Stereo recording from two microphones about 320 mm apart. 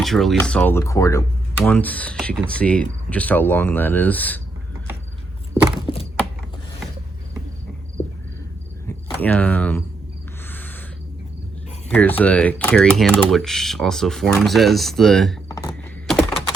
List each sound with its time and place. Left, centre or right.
0.0 s speech: centre
5.8 s a sound: centre
9.0 s speech: centre
10.5 s owl: centre
11.9 s speech: centre